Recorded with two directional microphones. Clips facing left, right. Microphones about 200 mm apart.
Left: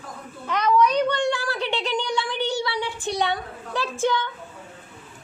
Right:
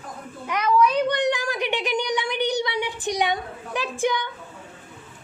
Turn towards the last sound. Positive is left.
turn(degrees=-15)  # may be behind; listen again after turning